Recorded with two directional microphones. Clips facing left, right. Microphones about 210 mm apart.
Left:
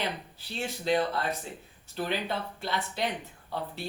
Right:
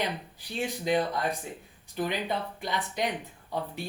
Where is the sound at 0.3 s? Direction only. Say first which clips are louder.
Right 3 dB; 15° right (ahead or behind).